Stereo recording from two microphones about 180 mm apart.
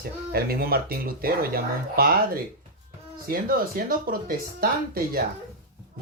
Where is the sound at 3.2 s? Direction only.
55° right (ahead or behind).